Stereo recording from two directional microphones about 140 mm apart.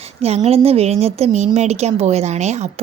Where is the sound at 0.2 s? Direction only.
50° right (ahead or behind).